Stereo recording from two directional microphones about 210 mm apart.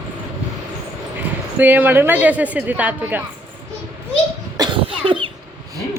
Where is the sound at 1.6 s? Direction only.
10° right (ahead or behind).